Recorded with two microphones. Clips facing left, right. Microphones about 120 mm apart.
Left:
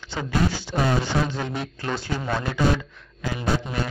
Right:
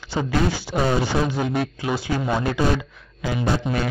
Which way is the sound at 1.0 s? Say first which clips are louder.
Right 3 dB; 10° right (ahead or behind).